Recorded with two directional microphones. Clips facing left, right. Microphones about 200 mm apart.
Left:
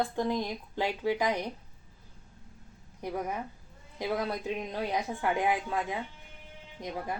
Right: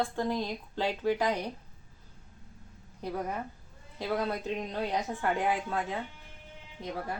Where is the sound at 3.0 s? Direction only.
10° left (ahead or behind).